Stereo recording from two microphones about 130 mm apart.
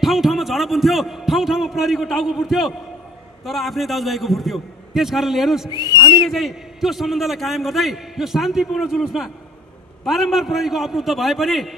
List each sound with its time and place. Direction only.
0.0 s a man's voice: centre (ahead or behind)
5.9 s speech: 30° left (ahead or behind)
6.3 s a man's voice: centre (ahead or behind)